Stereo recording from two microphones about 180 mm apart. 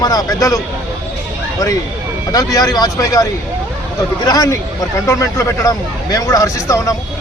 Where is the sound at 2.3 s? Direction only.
20° left (ahead or behind).